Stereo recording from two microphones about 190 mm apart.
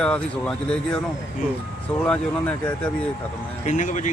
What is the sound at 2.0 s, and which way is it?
Speech, 5° left (ahead or behind).